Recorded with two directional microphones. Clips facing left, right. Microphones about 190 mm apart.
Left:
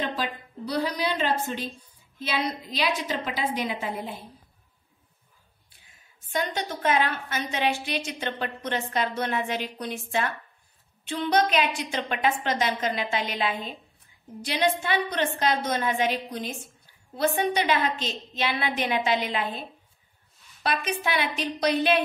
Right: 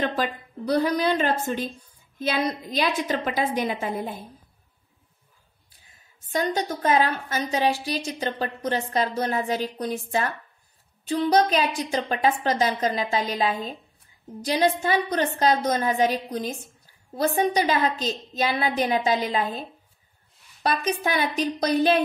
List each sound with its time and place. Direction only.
0.0 s a woman's voice: 45° right (ahead or behind)
6.3 s a woman's voice: 40° right (ahead or behind)
20.6 s a woman's voice: 40° right (ahead or behind)